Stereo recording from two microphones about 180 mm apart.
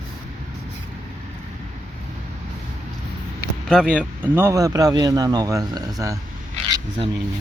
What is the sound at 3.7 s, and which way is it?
Speech, 5° right (ahead or behind).